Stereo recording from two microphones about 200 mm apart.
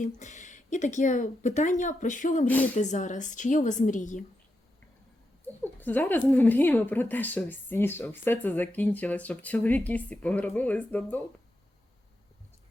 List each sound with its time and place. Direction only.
0.0 s a woman's voice: 35° left (ahead or behind)
5.6 s speech: 10° left (ahead or behind)